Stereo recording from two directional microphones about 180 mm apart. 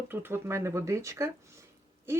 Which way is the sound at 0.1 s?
10° right (ahead or behind).